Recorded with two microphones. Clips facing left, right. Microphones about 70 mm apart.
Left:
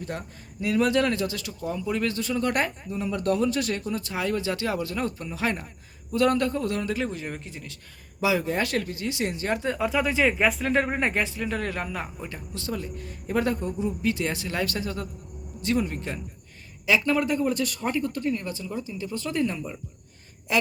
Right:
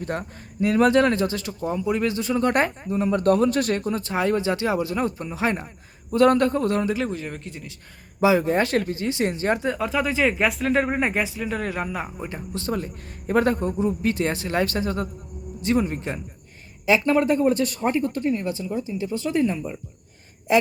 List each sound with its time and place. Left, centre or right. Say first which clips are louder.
0.0 s speech: right 5 dB; right
6.1 s speech: right 5 dB; right
6.9 s speech: right 3 dB; centre
8.2 s speech: right 6 dB; right
9.6 s speech: right 1 dB; centre
12.3 s speech: right 5 dB; right
15.6 s speech: right 4 dB; right